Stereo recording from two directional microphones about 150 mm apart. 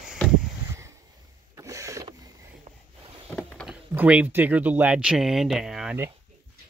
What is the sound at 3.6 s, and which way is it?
Speech, 10° right (ahead or behind).